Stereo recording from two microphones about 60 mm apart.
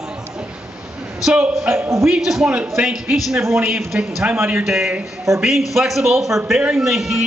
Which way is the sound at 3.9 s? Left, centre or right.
Right.